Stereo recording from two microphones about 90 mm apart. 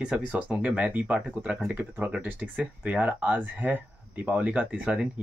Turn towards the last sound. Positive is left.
turn(degrees=-10)  # may be behind; listen again after turning